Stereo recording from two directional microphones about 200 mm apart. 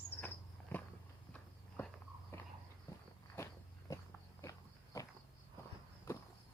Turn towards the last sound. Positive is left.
turn(degrees=15)  # may be behind; listen again after turning